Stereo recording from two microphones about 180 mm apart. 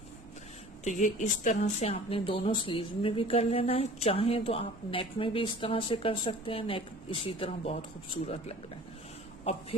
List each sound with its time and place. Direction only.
0.9 s speech: 45° left (ahead or behind)